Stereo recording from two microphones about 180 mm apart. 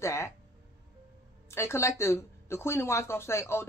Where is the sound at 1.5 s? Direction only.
15° left (ahead or behind).